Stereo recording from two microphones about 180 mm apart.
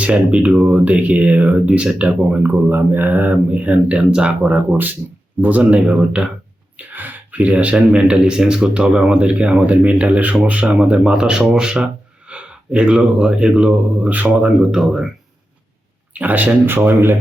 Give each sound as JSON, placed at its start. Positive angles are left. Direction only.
{"t": 0.0, "sound": "speech", "side_deg": -5}
{"t": 16.1, "sound": "speech", "side_deg": -10}